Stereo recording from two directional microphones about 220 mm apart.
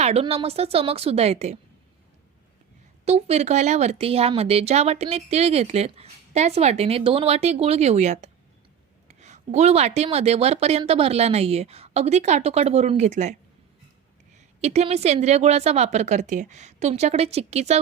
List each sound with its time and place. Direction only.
0.0 s speech: 30° right (ahead or behind)
3.0 s speech: 30° right (ahead or behind)
14.3 s speech: 30° right (ahead or behind)